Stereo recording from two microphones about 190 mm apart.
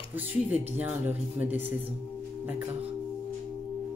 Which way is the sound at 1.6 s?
30° right (ahead or behind).